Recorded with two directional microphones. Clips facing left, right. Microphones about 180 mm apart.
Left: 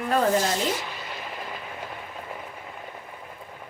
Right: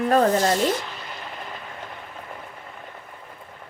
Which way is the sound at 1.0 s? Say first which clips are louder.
Left 1 dB; 5° left (ahead or behind).